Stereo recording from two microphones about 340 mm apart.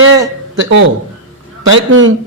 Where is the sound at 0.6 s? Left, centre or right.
Right.